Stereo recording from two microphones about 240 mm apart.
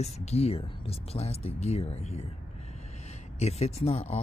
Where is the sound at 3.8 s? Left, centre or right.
Left.